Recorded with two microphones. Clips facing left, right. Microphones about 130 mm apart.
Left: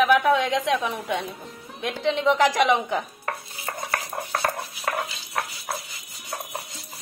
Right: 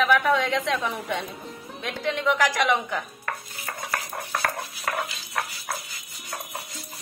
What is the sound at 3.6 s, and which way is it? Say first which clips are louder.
Stir: left 2 dB; 15° left (ahead or behind).